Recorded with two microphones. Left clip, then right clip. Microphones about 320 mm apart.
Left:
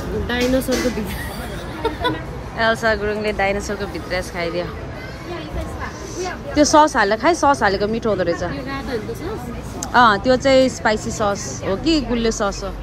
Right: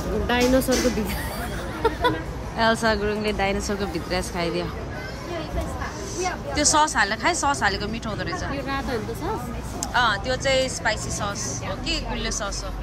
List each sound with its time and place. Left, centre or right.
0.3 s speech: centre
1.8 s speech: centre
6.2 s speech: centre
9.9 s speech: centre